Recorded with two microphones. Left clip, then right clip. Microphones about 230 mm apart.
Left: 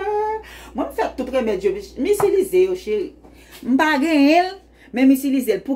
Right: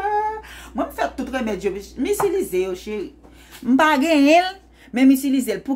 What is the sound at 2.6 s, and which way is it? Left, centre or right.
A woman's voice, right.